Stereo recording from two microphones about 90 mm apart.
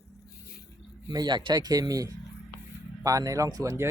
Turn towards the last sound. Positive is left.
turn(degrees=-40)  # may be behind; listen again after turning